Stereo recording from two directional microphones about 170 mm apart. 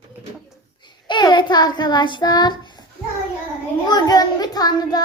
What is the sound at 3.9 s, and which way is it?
Child singing, 25° left (ahead or behind).